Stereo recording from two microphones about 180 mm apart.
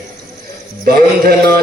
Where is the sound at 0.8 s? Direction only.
55° right (ahead or behind).